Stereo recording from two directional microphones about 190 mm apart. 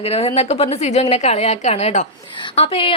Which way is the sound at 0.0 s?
30° left (ahead or behind).